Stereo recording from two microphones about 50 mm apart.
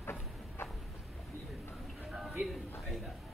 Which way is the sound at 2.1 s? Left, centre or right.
Centre.